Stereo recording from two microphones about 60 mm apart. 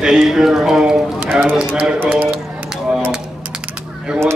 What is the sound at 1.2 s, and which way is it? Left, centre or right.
Speech, right.